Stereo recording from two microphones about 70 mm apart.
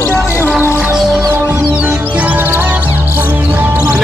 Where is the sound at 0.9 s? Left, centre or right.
Centre.